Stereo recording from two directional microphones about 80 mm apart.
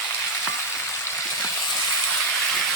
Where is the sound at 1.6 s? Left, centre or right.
Left.